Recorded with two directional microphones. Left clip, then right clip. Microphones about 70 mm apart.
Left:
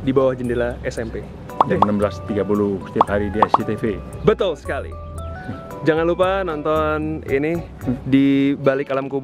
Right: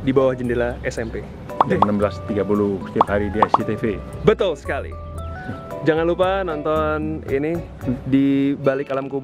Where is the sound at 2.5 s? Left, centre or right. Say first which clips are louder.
Even; centre.